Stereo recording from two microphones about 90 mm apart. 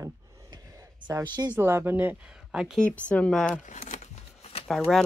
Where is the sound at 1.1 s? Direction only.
40° right (ahead or behind).